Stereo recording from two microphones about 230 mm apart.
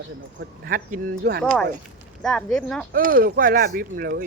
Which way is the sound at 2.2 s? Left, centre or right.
Centre.